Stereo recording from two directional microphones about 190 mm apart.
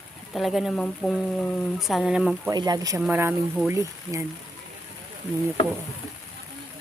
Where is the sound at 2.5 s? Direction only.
20° right (ahead or behind).